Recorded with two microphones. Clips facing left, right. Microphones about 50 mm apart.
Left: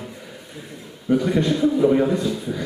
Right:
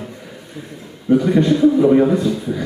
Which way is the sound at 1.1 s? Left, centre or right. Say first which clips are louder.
Right 5 dB; centre.